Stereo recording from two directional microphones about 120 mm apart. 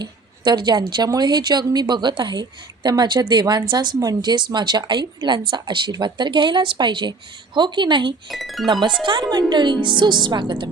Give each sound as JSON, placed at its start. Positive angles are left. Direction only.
{"t": 0.0, "sound": "a woman's voice", "side_deg": -40}
{"t": 8.3, "sound": "speech", "side_deg": 0}
{"t": 8.6, "sound": "a woman's voice", "side_deg": -40}